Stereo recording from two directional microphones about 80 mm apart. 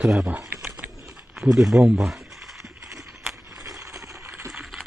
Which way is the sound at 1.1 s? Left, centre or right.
Centre.